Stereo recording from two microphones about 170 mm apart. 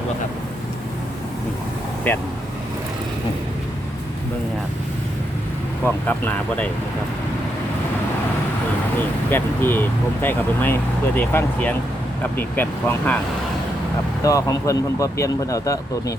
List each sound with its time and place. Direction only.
2.1 s speech: 10° left (ahead or behind)
5.8 s speech: 10° left (ahead or behind)
9.0 s speech: 10° left (ahead or behind)
14.3 s speech: 20° left (ahead or behind)